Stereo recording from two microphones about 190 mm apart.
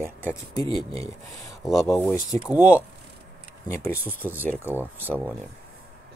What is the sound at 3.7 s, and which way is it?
Speech, 15° left (ahead or behind).